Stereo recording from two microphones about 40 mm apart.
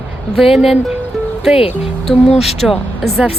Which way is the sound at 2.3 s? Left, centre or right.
Centre.